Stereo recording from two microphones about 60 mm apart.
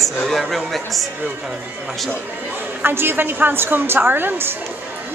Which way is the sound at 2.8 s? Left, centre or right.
Right.